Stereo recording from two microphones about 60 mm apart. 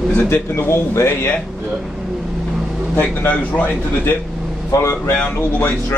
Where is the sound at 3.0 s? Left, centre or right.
Left.